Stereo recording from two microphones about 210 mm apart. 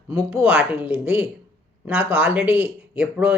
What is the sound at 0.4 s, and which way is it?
Speech, 5° right (ahead or behind).